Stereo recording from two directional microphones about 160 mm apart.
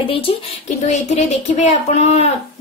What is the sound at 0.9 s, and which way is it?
Speech, 45° left (ahead or behind).